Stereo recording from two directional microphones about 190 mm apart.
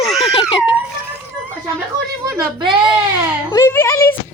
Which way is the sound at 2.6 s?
25° right (ahead or behind).